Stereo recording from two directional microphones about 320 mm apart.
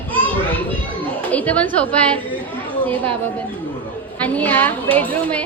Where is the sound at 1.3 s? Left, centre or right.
Centre.